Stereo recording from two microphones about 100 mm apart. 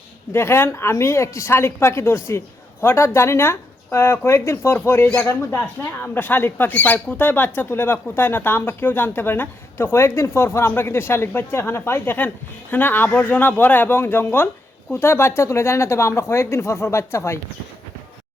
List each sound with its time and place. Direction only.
0.3 s speech: 25° left (ahead or behind)